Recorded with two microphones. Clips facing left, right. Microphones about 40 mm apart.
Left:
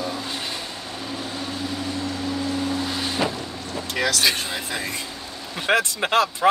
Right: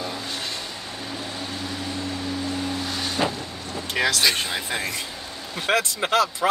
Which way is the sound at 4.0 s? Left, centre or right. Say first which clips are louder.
Right 1 dB; centre.